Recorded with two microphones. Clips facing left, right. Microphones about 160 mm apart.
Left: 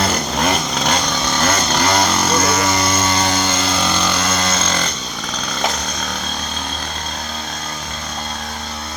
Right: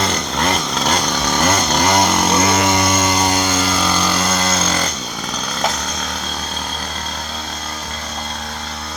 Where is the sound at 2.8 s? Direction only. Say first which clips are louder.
Right 1 dB; 5° right (ahead or behind).